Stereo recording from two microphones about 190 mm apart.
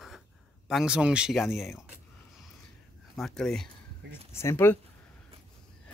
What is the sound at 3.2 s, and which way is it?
Speech, centre (ahead or behind).